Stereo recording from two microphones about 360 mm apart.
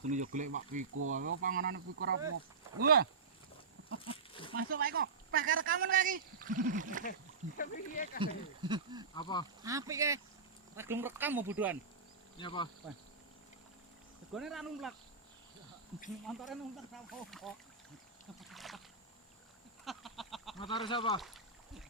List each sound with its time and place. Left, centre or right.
0.0 s speech: centre
2.3 s speech: right
4.0 s a sound: centre
4.5 s speech: right
7.0 s speech: left
8.2 s speech: centre
9.1 s speech: centre
9.6 s speech: centre
12.4 s speech: centre
14.3 s speech: centre
16.2 s speech: centre
18.3 s boat: centre
19.8 s a sound: centre
20.8 s speech: centre